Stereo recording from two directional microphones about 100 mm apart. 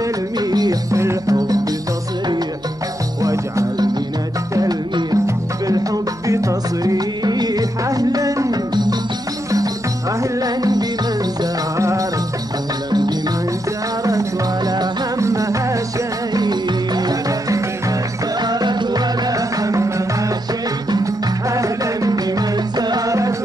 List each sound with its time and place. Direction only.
0.4 s music: 40° right (ahead or behind)
3.2 s jingle bell: 35° right (ahead or behind)
4.6 s music: 40° right (ahead or behind)
10.4 s music: 40° right (ahead or behind)
14.7 s music: 35° right (ahead or behind)
16.3 s music: 45° right (ahead or behind)
18.4 s music: 45° right (ahead or behind)
20.9 s music: 35° right (ahead or behind)